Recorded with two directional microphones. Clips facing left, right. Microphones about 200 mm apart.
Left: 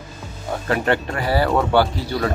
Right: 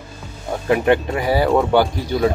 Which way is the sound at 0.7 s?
15° right (ahead or behind).